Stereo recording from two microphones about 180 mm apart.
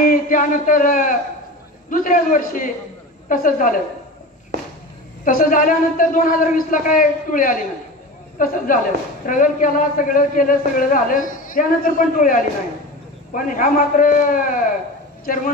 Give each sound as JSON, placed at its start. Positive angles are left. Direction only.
{"t": 0.0, "sound": "a man's voice", "side_deg": 50}
{"t": 5.2, "sound": "a man's voice", "side_deg": 50}